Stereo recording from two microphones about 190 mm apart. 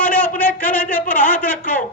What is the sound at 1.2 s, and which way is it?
Speech, 10° left (ahead or behind).